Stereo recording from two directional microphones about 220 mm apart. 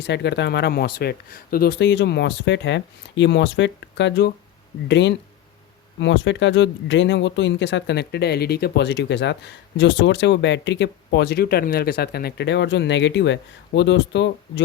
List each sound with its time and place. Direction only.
0.0 s speech: 50° left (ahead or behind)